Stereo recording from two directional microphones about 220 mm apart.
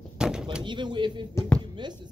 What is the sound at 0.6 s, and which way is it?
Speech, 20° right (ahead or behind).